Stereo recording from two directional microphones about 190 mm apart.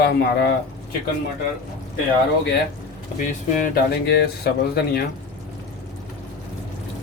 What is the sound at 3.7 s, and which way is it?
Speech, 55° left (ahead or behind).